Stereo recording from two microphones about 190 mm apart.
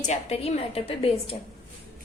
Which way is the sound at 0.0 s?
35° left (ahead or behind).